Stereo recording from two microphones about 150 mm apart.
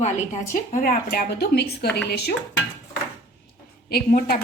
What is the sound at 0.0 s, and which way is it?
A woman's voice, 55° left (ahead or behind).